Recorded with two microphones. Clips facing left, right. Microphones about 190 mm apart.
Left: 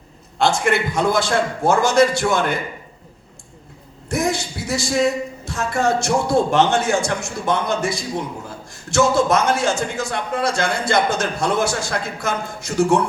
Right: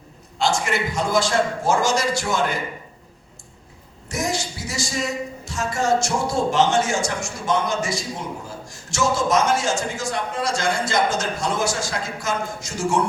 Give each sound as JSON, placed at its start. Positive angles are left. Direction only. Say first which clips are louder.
{"t": 0.3, "sound": "a man's voice", "louder": "left 4 dB", "side_deg": 60}
{"t": 4.1, "sound": "a sound", "louder": "left 4 dB", "side_deg": 60}
{"t": 5.5, "sound": "a man's voice", "louder": "left 1 dB", "side_deg": 60}